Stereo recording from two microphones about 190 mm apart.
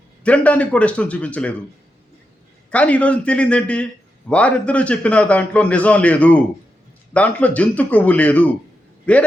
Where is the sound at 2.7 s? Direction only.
5° left (ahead or behind).